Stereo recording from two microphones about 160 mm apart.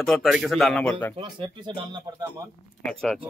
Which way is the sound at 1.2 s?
30° right (ahead or behind).